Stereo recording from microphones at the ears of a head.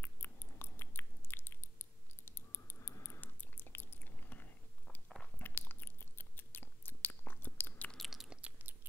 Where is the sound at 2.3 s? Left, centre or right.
Left.